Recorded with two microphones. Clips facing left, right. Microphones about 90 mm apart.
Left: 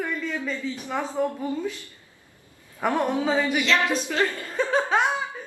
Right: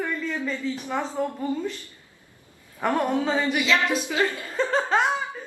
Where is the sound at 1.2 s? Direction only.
5° left (ahead or behind).